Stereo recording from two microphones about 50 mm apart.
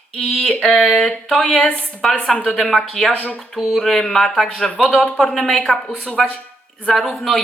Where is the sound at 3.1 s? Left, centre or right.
Left.